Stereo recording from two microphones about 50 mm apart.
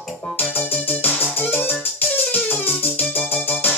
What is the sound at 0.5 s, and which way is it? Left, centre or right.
Music, left.